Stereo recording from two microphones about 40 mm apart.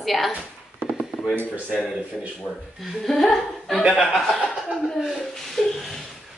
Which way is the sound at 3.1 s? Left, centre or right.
Centre.